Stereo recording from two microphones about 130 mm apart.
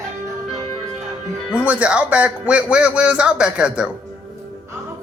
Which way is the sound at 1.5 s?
10° right (ahead or behind).